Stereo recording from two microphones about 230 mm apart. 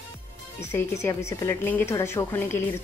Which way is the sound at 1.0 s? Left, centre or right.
Centre.